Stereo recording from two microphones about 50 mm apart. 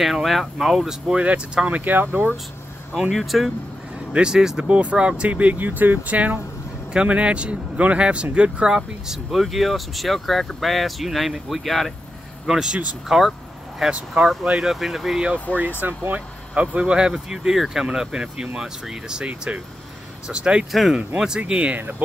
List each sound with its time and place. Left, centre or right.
0.0 s speech: centre
1.1 s speech: right
1.7 s speech: right
3.1 s speech: centre
4.1 s speech: centre
4.6 s speech: right; by 11.9 s centre
12.4 s speech: centre
13.9 s speech: right
15.5 s speech: left
15.8 s speech: right
16.5 s speech: right